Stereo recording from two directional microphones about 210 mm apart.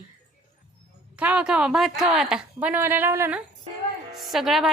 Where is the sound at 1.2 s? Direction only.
5° right (ahead or behind).